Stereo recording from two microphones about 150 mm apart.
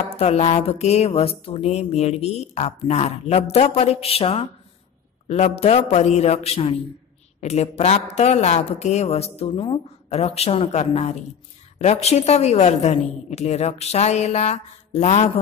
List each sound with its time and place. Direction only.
0.1 s speech: 45° left (ahead or behind)